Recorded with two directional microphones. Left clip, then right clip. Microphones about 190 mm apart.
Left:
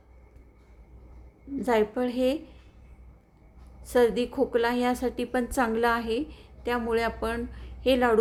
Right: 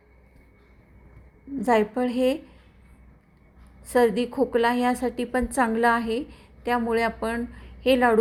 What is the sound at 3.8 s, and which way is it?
A woman's voice, 10° right (ahead or behind).